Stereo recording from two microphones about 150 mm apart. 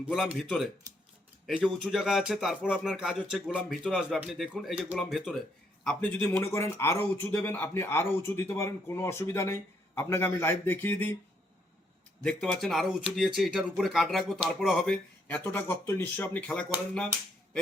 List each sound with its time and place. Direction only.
0.0 s speech: 5° right (ahead or behind); by 11.2 s 15° left (ahead or behind)
12.2 s speech: 5° left (ahead or behind)
15.5 s speech: 15° left (ahead or behind)